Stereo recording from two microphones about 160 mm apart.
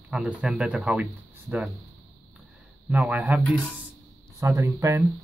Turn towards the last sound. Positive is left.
turn(degrees=-15)  # may be behind; listen again after turning